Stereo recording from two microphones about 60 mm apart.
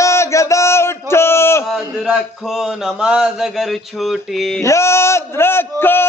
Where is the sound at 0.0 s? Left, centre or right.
Left.